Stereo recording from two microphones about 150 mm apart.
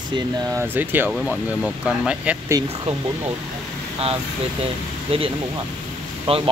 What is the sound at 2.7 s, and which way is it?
Speech, 35° right (ahead or behind).